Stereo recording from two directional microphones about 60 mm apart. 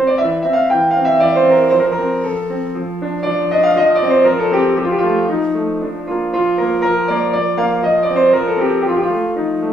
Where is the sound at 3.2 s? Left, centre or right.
Centre.